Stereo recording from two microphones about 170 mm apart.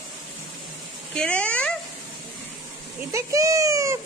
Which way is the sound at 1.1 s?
5° left (ahead or behind).